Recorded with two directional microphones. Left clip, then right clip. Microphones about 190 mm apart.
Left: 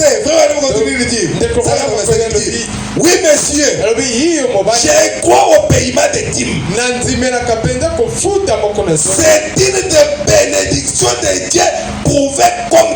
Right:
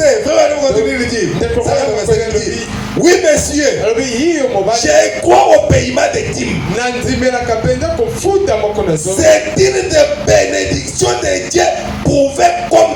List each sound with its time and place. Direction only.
0.0 s music: 45° left (ahead or behind)
3.0 s a sound: 45° left (ahead or behind)
9.2 s music: 45° left (ahead or behind)
12.0 s music: 45° left (ahead or behind)